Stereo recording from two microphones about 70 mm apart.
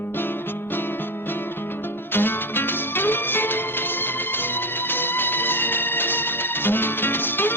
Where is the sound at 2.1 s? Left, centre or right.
Left.